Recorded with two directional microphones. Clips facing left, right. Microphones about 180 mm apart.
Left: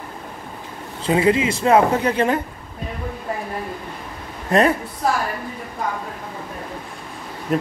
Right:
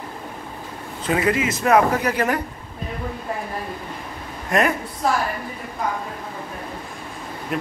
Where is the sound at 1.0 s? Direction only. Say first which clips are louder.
Left 3 dB; 30° left (ahead or behind).